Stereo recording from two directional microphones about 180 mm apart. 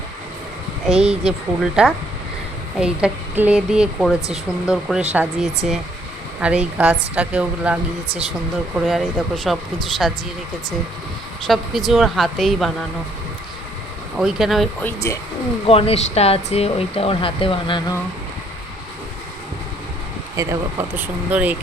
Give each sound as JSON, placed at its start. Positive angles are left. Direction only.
{"t": 0.9, "sound": "speech", "side_deg": -5}
{"t": 8.9, "sound": "speech", "side_deg": 0}
{"t": 11.4, "sound": "speech", "side_deg": 0}
{"t": 14.2, "sound": "speech", "side_deg": 0}
{"t": 14.8, "sound": "speech", "side_deg": 15}
{"t": 15.6, "sound": "speech", "side_deg": 35}
{"t": 20.3, "sound": "speech", "side_deg": -20}